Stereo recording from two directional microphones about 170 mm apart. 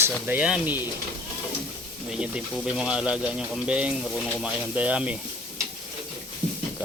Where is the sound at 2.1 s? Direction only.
5° right (ahead or behind).